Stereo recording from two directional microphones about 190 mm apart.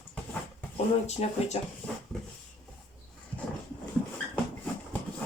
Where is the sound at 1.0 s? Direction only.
35° left (ahead or behind).